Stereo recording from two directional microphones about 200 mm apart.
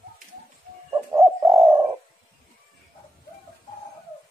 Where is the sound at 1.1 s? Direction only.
15° right (ahead or behind).